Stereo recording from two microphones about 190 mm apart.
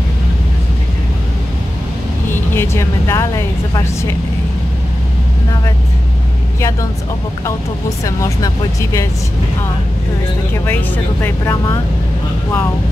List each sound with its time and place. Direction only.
2.5 s a woman's voice: 15° left (ahead or behind)
8.0 s speech: 15° left (ahead or behind)
11.2 s speech: 15° left (ahead or behind)